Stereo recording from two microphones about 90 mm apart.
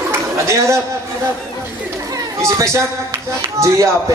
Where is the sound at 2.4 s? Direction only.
35° right (ahead or behind).